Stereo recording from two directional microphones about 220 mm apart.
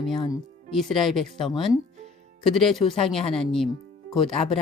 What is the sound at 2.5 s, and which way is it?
Speech, centre (ahead or behind).